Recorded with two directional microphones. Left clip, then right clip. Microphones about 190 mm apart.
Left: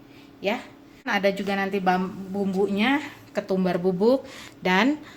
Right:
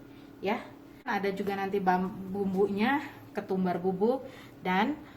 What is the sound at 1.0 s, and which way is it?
Speech, 55° left (ahead or behind).